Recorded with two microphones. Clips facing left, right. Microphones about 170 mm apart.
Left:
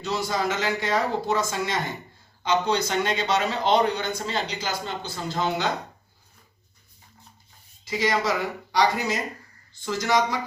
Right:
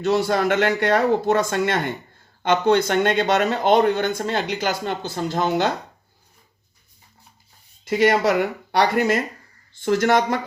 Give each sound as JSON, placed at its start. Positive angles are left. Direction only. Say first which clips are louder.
{"t": 0.0, "sound": "speech", "louder": "right 7 dB", "side_deg": -60}
{"t": 7.9, "sound": "speech", "louder": "right 7 dB", "side_deg": -60}